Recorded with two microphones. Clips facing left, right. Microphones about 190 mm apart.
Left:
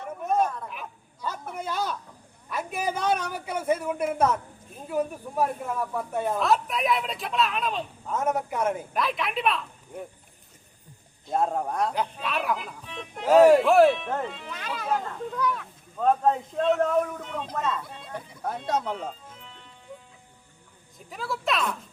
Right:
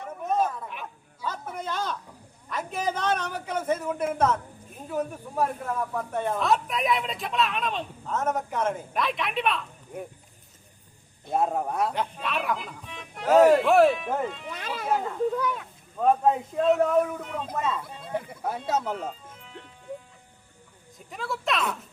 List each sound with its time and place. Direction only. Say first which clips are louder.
0.3 s a sound: left 1 dB; centre (ahead or behind)
1.5 s a sound: left 2 dB; 10° left (ahead or behind)
2.5 s a man's voice: even; 10° left (ahead or behind)
11.3 s a child's voice: even; 5° right (ahead or behind)
15.4 s speech: left 1 dB; 25° right (ahead or behind)
16.0 s speech: right 1 dB; 5° right (ahead or behind)
21.1 s speech: even; centre (ahead or behind)